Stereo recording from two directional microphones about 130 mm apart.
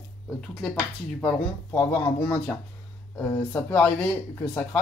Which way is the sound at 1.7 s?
20° left (ahead or behind).